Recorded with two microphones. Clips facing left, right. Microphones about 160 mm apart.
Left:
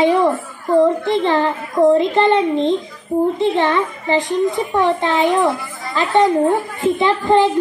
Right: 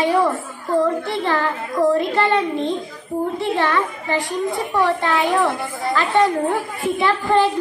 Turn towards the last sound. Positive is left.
turn(degrees=20)  # may be behind; listen again after turning